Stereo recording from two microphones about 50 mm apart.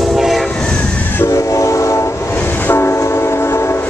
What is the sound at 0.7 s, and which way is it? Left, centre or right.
Train, left.